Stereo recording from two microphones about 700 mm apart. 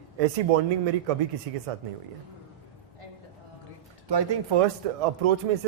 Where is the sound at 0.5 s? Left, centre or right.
Right.